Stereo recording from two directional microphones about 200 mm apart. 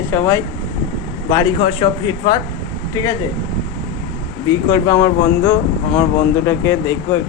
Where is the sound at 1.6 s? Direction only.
25° left (ahead or behind).